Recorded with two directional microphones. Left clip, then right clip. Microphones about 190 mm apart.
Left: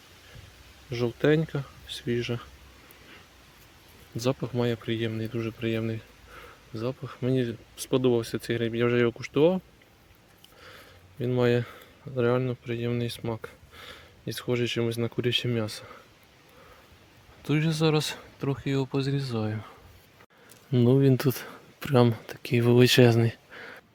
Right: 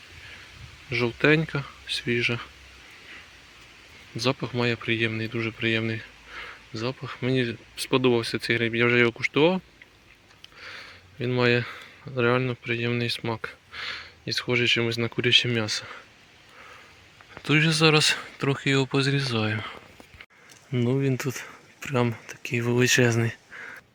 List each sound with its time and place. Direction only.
0.9 s speech: 5° left (ahead or behind)
4.2 s speech: 10° left (ahead or behind)
10.6 s speech: 10° left (ahead or behind)
17.4 s speech: 5° left (ahead or behind)
20.7 s speech: 25° left (ahead or behind)